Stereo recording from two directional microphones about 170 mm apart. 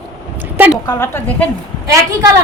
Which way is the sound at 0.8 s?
15° left (ahead or behind).